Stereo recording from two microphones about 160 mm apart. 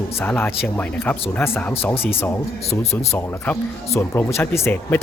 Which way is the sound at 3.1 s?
15° left (ahead or behind).